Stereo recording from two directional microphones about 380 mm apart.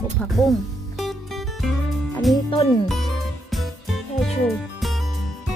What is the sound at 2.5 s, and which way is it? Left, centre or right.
Speech, centre.